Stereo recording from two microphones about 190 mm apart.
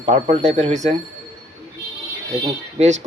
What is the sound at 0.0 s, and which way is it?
Speech, 35° right (ahead or behind).